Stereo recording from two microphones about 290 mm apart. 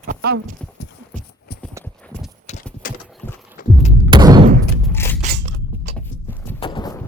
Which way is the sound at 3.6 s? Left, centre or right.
Left.